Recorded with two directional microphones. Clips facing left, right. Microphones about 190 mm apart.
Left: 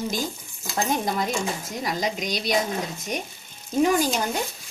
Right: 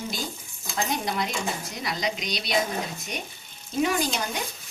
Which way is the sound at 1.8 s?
45° left (ahead or behind).